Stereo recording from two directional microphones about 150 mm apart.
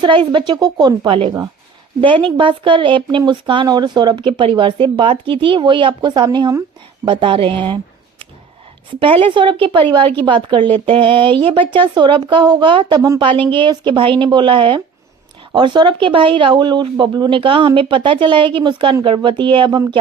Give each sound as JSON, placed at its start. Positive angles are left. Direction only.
{"t": 0.0, "sound": "speech", "side_deg": -30}
{"t": 9.0, "sound": "speech", "side_deg": -35}